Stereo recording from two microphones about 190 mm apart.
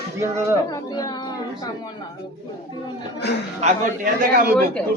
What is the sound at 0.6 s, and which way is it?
Speech, 20° left (ahead or behind).